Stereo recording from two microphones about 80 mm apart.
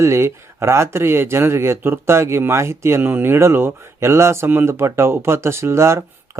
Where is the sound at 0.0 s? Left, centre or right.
Right.